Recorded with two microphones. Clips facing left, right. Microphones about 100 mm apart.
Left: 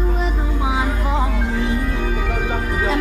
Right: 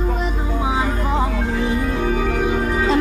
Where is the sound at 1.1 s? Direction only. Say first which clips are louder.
Right 1 dB; 10° right (ahead or behind).